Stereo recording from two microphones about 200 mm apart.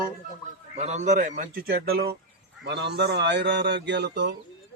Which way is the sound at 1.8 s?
50° right (ahead or behind).